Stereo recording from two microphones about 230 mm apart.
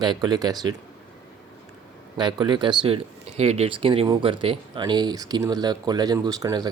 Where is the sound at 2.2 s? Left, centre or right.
Centre.